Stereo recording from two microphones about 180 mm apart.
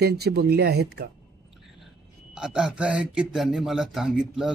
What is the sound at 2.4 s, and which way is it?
A man's voice, 5° right (ahead or behind).